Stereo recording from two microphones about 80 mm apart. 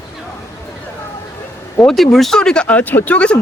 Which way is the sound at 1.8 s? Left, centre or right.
Centre.